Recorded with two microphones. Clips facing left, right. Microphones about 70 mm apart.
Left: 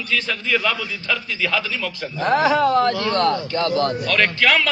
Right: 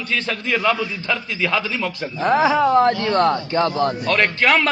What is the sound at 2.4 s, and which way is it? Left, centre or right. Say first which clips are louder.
A man's voice: right 2 dB; centre.